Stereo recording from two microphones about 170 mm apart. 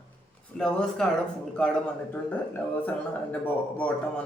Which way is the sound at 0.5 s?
5° left (ahead or behind).